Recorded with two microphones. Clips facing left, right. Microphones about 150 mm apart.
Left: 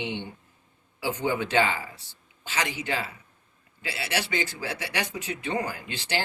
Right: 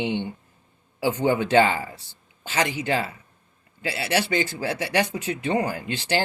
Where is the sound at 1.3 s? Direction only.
40° right (ahead or behind).